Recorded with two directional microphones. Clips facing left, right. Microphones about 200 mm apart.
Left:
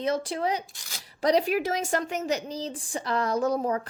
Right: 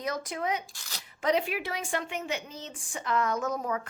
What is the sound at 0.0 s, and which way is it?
A woman's voice, 30° left (ahead or behind).